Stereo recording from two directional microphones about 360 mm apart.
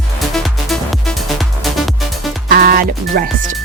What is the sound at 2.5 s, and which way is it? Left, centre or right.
Music, right.